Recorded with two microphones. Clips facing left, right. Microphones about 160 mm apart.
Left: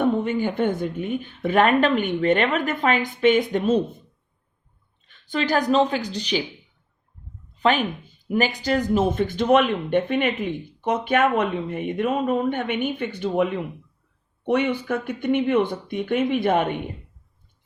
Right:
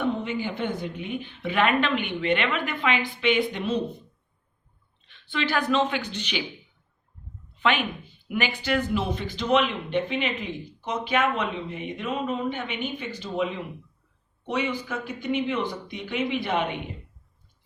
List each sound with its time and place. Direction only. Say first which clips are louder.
0.0 s speech: left 6 dB; 50° left (ahead or behind)
5.0 s speech: left 4 dB; 45° left (ahead or behind)
7.6 s speech: left 4 dB; 40° left (ahead or behind)